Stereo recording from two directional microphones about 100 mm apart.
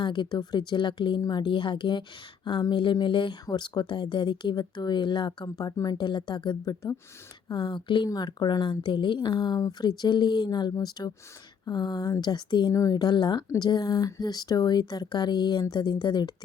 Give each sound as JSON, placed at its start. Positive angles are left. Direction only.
{"t": 0.0, "sound": "a woman's voice", "side_deg": 50}